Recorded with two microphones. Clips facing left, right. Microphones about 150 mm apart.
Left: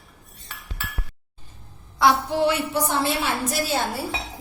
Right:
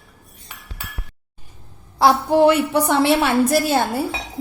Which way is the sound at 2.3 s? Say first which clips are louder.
Right 8 dB; 55° right (ahead or behind).